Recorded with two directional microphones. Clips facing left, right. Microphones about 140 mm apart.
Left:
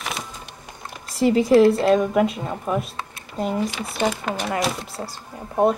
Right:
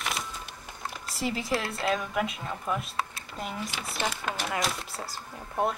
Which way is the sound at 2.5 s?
40° left (ahead or behind).